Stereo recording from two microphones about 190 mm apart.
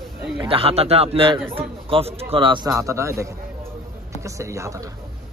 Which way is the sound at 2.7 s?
15° right (ahead or behind).